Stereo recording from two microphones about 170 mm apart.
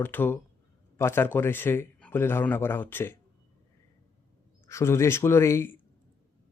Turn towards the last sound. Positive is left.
turn(degrees=15)  # may be behind; listen again after turning